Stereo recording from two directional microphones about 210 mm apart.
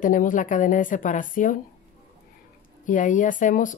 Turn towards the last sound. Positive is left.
turn(degrees=40)  # may be behind; listen again after turning